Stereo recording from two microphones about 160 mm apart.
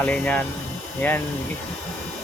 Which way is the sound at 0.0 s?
10° left (ahead or behind).